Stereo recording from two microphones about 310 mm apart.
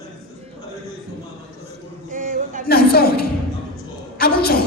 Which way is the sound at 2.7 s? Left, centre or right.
Left.